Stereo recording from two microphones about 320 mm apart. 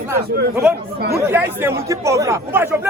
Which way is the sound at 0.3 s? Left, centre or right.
Right.